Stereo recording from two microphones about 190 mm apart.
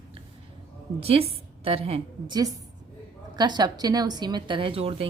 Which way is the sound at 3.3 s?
20° right (ahead or behind).